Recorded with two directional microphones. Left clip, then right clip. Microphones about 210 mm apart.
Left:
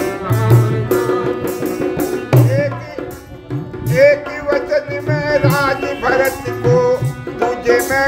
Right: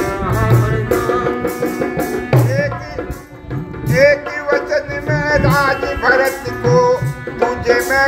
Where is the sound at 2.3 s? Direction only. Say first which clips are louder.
Left 1 dB; 55° left (ahead or behind).